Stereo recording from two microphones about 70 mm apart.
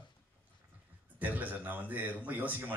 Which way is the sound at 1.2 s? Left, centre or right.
Right.